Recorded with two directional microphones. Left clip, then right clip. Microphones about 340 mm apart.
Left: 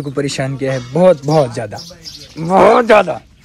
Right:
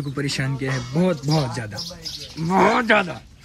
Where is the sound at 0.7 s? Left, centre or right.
Right.